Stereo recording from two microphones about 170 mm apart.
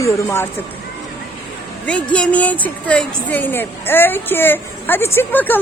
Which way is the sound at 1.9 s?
5° left (ahead or behind).